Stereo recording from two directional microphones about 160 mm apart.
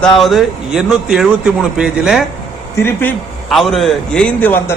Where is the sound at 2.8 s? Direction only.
10° left (ahead or behind).